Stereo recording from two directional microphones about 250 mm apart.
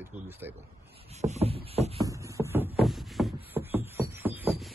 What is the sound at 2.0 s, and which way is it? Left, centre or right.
Music, centre.